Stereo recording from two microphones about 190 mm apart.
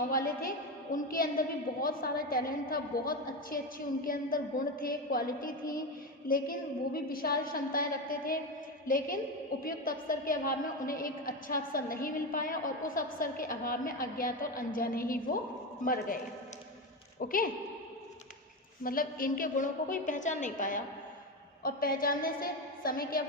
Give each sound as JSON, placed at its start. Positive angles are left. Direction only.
{"t": 0.1, "sound": "a woman's voice", "side_deg": 50}
{"t": 17.2, "sound": "a woman's voice", "side_deg": 45}
{"t": 18.8, "sound": "a woman's voice", "side_deg": 50}